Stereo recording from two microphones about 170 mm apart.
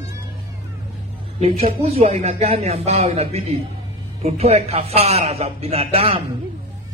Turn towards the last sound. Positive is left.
turn(degrees=-35)  # may be behind; listen again after turning